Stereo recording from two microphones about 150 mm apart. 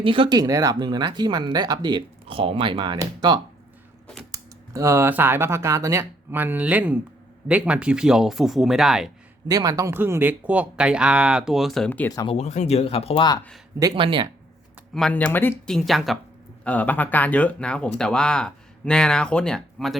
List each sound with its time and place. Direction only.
0.0 s speech: 35° right (ahead or behind); by 9.1 s 5° right (ahead or behind)
9.5 s speech: 25° right (ahead or behind); by 11.9 s centre (ahead or behind)
11.9 s speech: 10° left (ahead or behind)
12.1 s speech: 30° left (ahead or behind)
12.4 s speech: 50° left (ahead or behind)
13.9 s speech: 35° right (ahead or behind)
14.9 s speech: 5° left (ahead or behind)
15.7 s speech: centre (ahead or behind)